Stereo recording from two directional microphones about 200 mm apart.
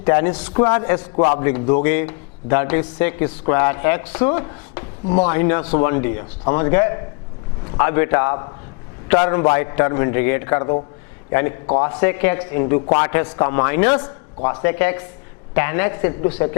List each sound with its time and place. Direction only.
0.0 s a man's voice: 15° left (ahead or behind)
0.9 s a man's voice: 30° left (ahead or behind)
1.3 s a man's voice: 15° left (ahead or behind)